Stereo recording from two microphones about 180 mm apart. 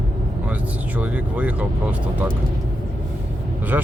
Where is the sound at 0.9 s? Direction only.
10° right (ahead or behind).